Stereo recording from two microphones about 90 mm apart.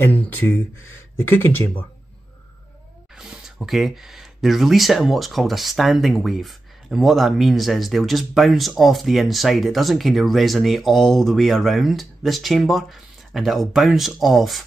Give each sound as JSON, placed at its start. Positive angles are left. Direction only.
{"t": 0.0, "sound": "speech", "side_deg": 20}
{"t": 3.2, "sound": "speech", "side_deg": -5}